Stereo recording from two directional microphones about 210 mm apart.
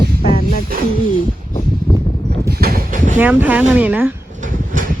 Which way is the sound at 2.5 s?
45° right (ahead or behind).